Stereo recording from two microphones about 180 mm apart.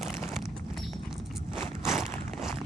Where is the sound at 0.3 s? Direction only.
Centre (ahead or behind).